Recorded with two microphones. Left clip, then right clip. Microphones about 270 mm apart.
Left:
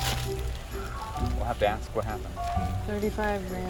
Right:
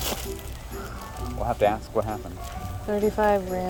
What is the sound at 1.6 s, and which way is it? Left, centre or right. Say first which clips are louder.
Speech: right 4 dB; right.